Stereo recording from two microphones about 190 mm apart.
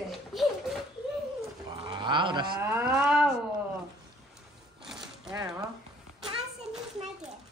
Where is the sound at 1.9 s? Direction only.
25° right (ahead or behind).